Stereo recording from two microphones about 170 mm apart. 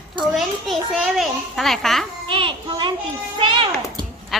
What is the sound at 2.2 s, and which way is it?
Children playing, 30° right (ahead or behind).